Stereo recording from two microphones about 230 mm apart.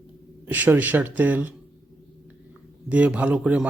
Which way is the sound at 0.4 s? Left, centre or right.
Centre.